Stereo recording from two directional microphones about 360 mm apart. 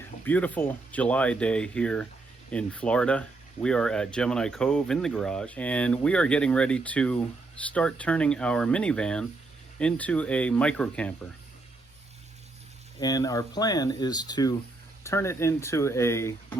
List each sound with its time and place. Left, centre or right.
0.3 s speech: centre
13.0 s speech: centre